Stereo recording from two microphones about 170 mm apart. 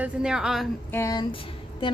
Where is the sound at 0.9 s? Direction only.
20° left (ahead or behind).